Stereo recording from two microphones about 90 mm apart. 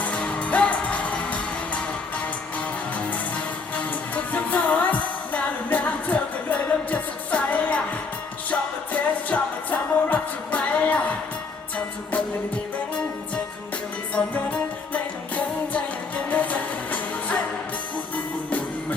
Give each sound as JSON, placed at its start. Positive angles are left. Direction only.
{"t": 0.0, "sound": "music", "side_deg": 10}
{"t": 3.8, "sound": "music", "side_deg": 15}
{"t": 14.2, "sound": "music", "side_deg": 20}